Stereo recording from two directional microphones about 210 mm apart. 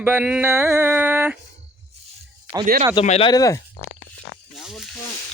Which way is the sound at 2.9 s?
30° left (ahead or behind).